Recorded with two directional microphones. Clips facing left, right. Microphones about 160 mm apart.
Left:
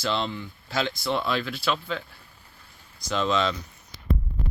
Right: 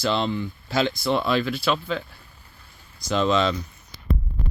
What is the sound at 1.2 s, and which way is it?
Speech, 5° right (ahead or behind).